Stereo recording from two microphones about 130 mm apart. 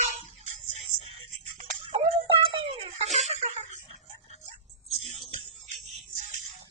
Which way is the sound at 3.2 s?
65° right (ahead or behind).